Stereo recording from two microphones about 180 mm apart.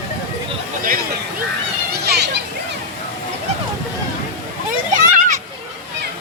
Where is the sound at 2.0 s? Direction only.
70° right (ahead or behind).